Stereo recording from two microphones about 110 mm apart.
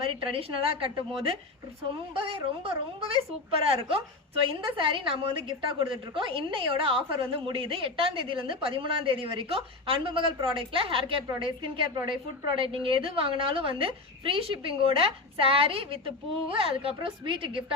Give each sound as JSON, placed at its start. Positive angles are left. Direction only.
{"t": 0.0, "sound": "a woman's voice", "side_deg": -55}